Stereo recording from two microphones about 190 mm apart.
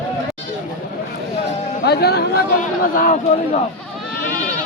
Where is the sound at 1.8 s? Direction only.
55° left (ahead or behind).